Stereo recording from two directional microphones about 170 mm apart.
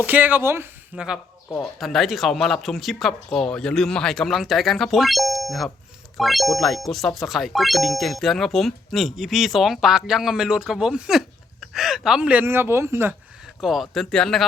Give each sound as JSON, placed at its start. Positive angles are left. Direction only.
{"t": 0.0, "sound": "speech", "side_deg": -10}
{"t": 13.6, "sound": "speech", "side_deg": 0}